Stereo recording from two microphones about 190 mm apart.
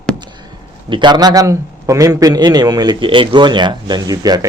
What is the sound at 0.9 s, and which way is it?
A man's voice, 25° right (ahead or behind).